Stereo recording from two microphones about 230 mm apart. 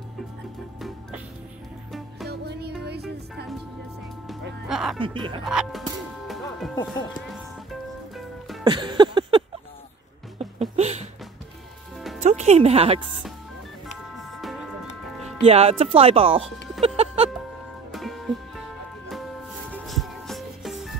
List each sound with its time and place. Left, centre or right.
0.7 s music: centre
2.2 s music: right
4.6 s speech: centre
4.9 s speech: right
5.4 s music: centre
8.2 s music: centre
8.6 s a sound: centre
10.8 s music: right
12.2 s speech: right
13.8 s music: centre
15.4 s speech: right
16.8 s music: right
17.9 s music: centre